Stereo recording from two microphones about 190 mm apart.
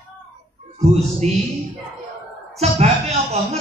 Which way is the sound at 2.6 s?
35° right (ahead or behind).